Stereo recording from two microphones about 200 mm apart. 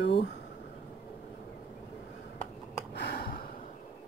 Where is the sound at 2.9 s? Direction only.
55° left (ahead or behind).